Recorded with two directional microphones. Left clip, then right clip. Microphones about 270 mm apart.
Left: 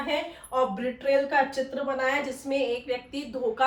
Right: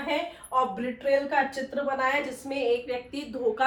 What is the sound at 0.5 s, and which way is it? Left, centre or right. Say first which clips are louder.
A woman's voice: even; centre.